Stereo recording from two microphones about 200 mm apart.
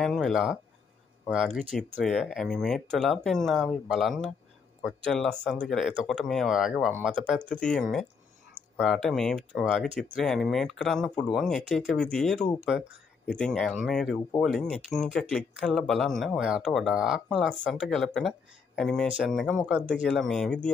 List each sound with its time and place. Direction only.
0.0 s speech: centre (ahead or behind)